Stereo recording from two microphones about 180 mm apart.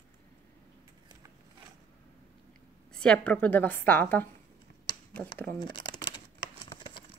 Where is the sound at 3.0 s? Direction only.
5° left (ahead or behind).